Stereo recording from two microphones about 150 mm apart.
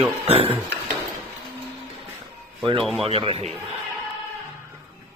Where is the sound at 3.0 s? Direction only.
40° right (ahead or behind).